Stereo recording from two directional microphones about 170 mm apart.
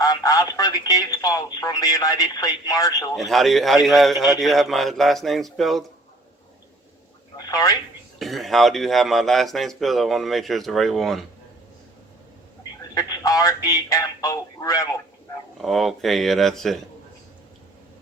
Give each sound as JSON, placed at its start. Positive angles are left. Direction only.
{"t": 0.0, "sound": "speech", "side_deg": 20}
{"t": 3.2, "sound": "a man's voice", "side_deg": 0}
{"t": 7.3, "sound": "speech", "side_deg": 20}
{"t": 8.2, "sound": "a man's voice", "side_deg": 0}
{"t": 12.9, "sound": "speech", "side_deg": 20}
{"t": 15.6, "sound": "a man's voice", "side_deg": 0}